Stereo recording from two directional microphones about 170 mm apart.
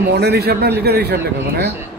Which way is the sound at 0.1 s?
75° right (ahead or behind).